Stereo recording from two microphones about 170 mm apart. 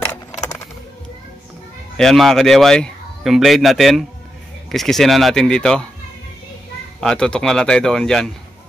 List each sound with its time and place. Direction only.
0.3 s a sound: 20° left (ahead or behind)
2.0 s speech: centre (ahead or behind)
7.0 s speech: 5° left (ahead or behind)